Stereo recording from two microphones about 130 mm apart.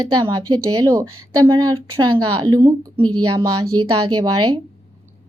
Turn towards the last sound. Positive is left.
turn(degrees=-35)  # may be behind; listen again after turning